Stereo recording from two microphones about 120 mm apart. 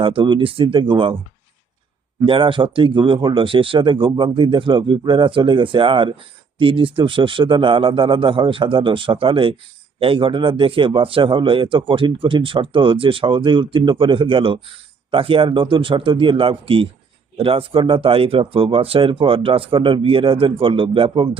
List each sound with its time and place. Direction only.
0.0 s a man's voice: 45° right (ahead or behind)
2.2 s a man's voice: 45° right (ahead or behind)